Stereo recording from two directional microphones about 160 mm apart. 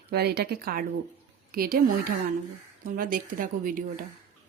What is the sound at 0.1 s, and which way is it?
Speech, 90° right.